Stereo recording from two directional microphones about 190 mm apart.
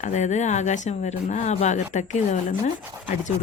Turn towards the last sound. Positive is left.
turn(degrees=40)  # may be behind; listen again after turning